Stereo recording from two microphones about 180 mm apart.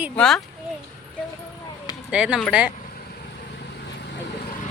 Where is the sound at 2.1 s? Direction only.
5° right (ahead or behind).